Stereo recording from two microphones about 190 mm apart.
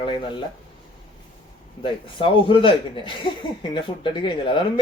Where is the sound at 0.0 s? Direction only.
25° left (ahead or behind).